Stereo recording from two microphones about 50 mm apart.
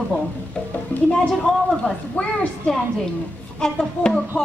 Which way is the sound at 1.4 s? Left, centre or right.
Centre.